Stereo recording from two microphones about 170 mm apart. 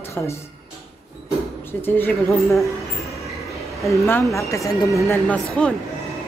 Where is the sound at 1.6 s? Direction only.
10° left (ahead or behind).